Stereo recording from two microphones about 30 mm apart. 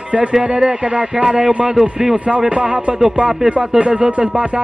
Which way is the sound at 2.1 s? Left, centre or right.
Right.